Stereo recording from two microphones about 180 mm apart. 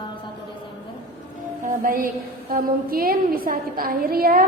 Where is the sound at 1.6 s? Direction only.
45° right (ahead or behind).